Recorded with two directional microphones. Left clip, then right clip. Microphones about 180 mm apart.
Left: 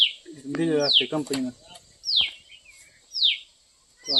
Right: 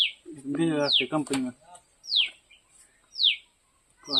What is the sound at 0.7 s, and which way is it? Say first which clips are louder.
Speech: left 4 dB; 15° right (ahead or behind).